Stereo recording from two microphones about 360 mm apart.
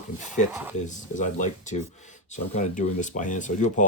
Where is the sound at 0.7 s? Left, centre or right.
Centre.